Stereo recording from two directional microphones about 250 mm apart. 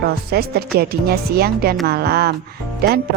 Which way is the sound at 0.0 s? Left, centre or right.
Right.